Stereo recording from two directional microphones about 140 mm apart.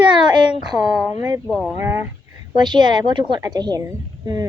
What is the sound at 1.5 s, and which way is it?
Speech, 5° left (ahead or behind).